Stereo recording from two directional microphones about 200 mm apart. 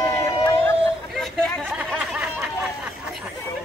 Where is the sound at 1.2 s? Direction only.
Centre (ahead or behind).